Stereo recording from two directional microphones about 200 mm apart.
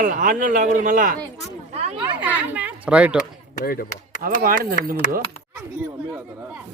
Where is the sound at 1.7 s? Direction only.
35° right (ahead or behind).